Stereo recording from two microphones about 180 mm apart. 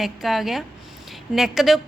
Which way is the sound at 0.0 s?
Centre (ahead or behind).